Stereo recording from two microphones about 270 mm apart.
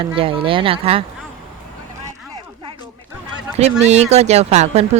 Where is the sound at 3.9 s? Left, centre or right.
Right.